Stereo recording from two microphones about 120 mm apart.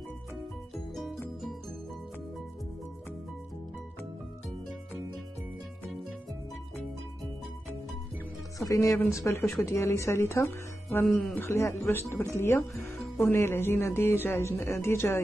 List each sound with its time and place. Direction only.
0.9 s music: centre (ahead or behind)
8.5 s speech: 25° left (ahead or behind)